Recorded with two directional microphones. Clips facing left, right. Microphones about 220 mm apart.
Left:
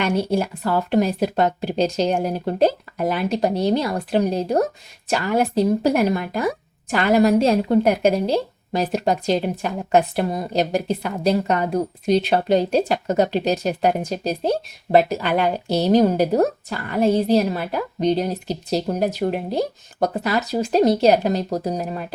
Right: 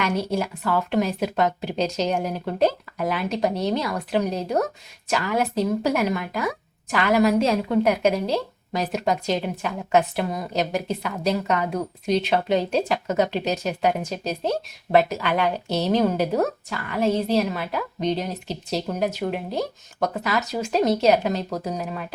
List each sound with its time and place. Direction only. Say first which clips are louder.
0.0 s a woman's voice: left 4 dB; 30° left (ahead or behind)